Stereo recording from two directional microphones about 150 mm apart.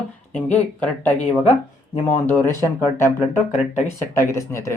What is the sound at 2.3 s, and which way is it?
Speech, 15° left (ahead or behind).